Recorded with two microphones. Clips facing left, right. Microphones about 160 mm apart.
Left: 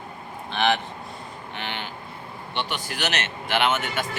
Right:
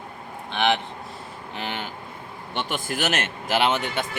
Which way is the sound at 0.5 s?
20° right (ahead or behind).